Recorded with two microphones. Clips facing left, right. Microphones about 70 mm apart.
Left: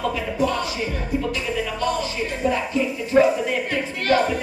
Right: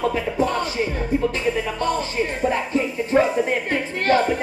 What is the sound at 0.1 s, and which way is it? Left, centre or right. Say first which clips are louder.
Speech: right 1 dB; right.